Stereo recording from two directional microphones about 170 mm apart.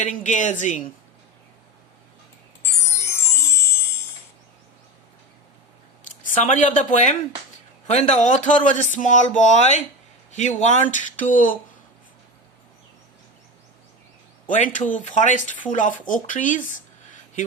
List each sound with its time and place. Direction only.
0.0 s speech: 45° left (ahead or behind)
2.8 s music: 15° left (ahead or behind)
6.1 s speech: 45° left (ahead or behind)
14.4 s speech: 50° left (ahead or behind)